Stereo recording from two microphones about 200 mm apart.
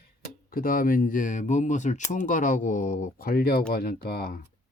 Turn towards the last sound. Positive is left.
turn(degrees=50)  # may be behind; listen again after turning